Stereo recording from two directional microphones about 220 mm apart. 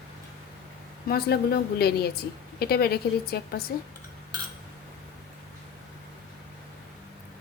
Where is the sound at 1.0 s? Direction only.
45° left (ahead or behind).